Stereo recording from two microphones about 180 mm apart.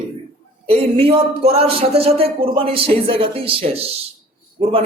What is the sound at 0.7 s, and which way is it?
A man's voice, 30° right (ahead or behind).